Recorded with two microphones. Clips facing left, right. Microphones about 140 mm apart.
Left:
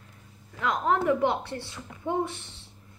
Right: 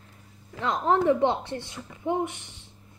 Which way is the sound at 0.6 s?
30° right (ahead or behind).